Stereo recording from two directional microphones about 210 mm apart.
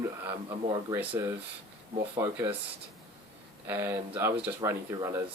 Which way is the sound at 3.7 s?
10° right (ahead or behind).